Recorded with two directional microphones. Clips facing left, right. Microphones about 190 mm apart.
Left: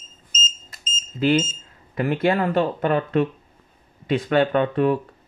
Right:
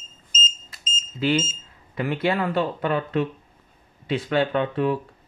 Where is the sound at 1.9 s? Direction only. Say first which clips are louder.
Left 3 dB; 45° left (ahead or behind).